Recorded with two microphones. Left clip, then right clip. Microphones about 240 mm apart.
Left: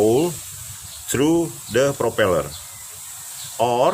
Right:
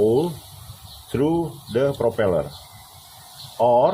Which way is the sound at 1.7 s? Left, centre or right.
Left.